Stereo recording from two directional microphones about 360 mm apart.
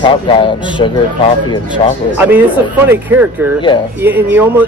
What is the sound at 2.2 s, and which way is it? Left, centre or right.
Speech, centre.